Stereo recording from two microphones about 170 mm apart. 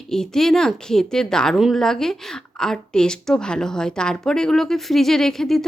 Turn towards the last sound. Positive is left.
turn(degrees=0)  # may be behind; listen again after turning